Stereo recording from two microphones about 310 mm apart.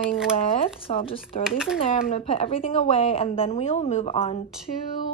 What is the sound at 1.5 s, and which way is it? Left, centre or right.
Speech, centre.